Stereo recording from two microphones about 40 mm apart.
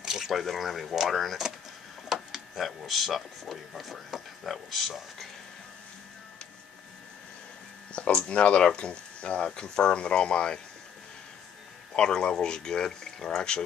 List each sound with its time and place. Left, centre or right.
0.0 s a sound: centre
0.3 s speech: centre
2.3 s a sound: centre
2.8 s speech: centre
7.9 s speech: left
11.9 s speech: centre